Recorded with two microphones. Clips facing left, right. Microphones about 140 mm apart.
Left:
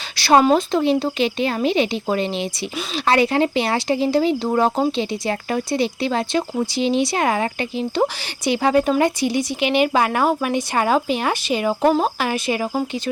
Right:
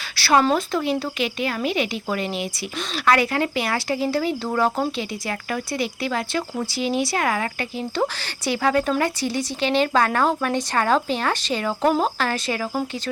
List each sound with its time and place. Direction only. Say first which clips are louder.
0.2 s speech: left 4 dB; 20° left (ahead or behind)